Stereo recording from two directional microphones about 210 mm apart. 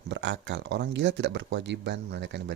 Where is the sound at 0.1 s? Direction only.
55° right (ahead or behind).